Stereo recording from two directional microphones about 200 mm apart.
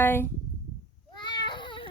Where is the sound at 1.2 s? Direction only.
20° left (ahead or behind).